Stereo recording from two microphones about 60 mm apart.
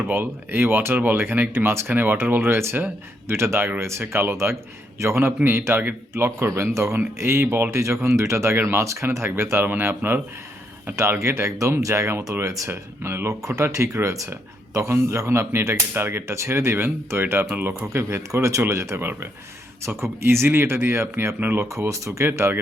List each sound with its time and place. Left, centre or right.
0.0 s speech: right
1.9 s speech: right
7.8 s speech: right
10.9 s speech: right
11.8 s speech: right
12.3 s speech: right
13.4 s speech: right
14.8 s speech: right
17.8 s speech: right
21.7 s speech: right
22.2 s speech: right